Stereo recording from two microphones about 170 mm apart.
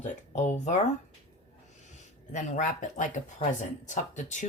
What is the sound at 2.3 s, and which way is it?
Speech, 50° left (ahead or behind).